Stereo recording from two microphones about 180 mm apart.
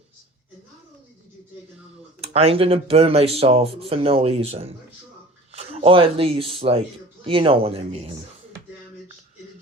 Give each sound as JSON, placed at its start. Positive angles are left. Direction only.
{"t": 2.2, "sound": "a man's voice", "side_deg": -35}